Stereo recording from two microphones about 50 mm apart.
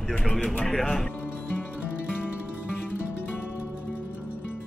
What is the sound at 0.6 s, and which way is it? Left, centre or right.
Music, centre.